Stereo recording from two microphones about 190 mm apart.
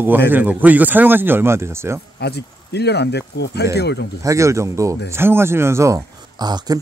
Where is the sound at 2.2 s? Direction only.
60° left (ahead or behind).